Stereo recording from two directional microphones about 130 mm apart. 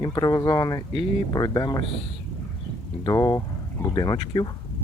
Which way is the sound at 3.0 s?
30° left (ahead or behind).